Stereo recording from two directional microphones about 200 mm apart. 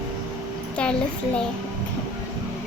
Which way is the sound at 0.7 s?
5° left (ahead or behind).